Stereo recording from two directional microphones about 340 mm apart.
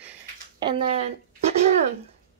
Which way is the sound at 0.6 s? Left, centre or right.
Centre.